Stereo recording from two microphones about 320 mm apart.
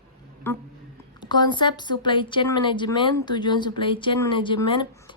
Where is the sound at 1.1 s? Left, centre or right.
Centre.